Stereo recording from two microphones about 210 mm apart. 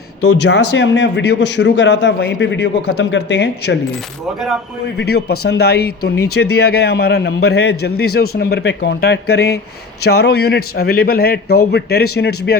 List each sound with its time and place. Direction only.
0.2 s speech: 90° left
0.7 s a man's voice: 55° left (ahead or behind)
4.9 s a man's voice: 50° left (ahead or behind)